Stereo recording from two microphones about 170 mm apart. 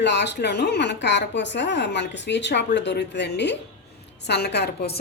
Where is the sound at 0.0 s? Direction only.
90° left.